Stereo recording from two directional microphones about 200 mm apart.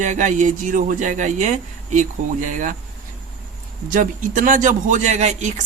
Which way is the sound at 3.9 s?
40° right (ahead or behind).